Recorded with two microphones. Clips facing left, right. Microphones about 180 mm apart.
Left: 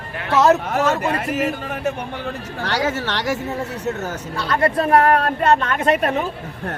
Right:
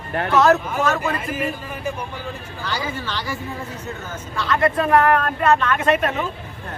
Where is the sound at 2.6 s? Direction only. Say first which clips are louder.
Left 5 dB; 80° left.